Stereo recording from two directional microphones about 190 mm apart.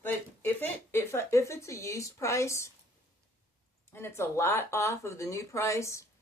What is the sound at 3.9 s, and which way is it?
Speech, 15° left (ahead or behind).